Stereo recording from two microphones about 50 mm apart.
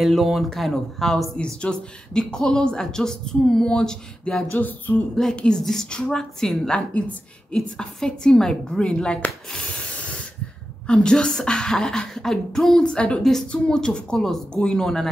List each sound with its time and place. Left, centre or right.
0.0 s speech: centre
1.3 s speech: centre
4.2 s a sound: centre
4.5 s a sound: left
5.2 s speech: centre
9.8 s spray: left
10.9 s speech: centre
12.8 s a woman's voice: left
13.2 s speech: centre
13.5 s speech: centre